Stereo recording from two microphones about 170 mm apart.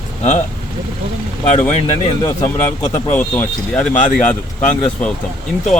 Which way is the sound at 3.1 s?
10° left (ahead or behind).